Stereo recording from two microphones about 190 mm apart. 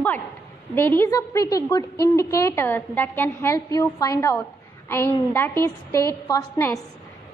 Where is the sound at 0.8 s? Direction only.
10° left (ahead or behind).